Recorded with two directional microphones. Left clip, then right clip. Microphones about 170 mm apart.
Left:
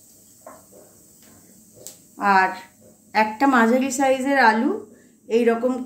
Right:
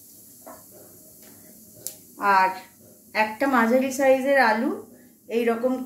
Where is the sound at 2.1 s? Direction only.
75° left (ahead or behind).